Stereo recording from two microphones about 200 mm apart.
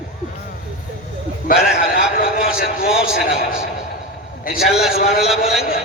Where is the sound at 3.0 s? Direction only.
45° left (ahead or behind).